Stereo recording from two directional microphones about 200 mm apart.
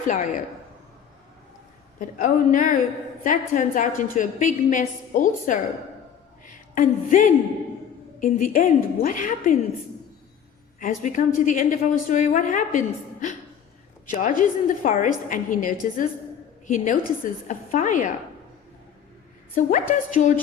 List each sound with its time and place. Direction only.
0.1 s a woman's voice: 40° left (ahead or behind)
2.0 s a woman's voice: 40° left (ahead or behind)
10.8 s a woman's voice: 40° left (ahead or behind)
19.5 s a woman's voice: 40° left (ahead or behind)